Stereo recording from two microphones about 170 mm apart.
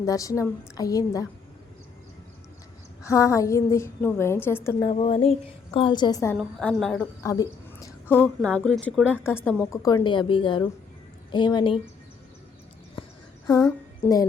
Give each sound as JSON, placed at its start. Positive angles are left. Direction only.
{"t": 0.0, "sound": "a woman's voice", "side_deg": 20}
{"t": 3.0, "sound": "a woman's voice", "side_deg": 20}
{"t": 4.8, "sound": "a woman's voice", "side_deg": 30}
{"t": 6.3, "sound": "a woman's voice", "side_deg": 0}
{"t": 7.2, "sound": "a sound", "side_deg": 20}
{"t": 8.1, "sound": "a woman's voice", "side_deg": 10}
{"t": 9.8, "sound": "a woman's voice", "side_deg": 25}
{"t": 13.0, "sound": "a sound", "side_deg": 30}
{"t": 14.0, "sound": "a woman's voice", "side_deg": 15}